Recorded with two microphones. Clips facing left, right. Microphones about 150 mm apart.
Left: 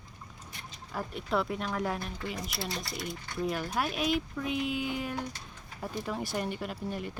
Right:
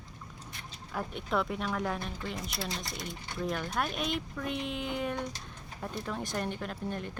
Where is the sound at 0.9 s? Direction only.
Centre (ahead or behind).